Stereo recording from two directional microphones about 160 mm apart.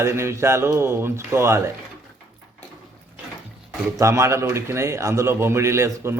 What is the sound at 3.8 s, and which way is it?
Speech, 20° right (ahead or behind).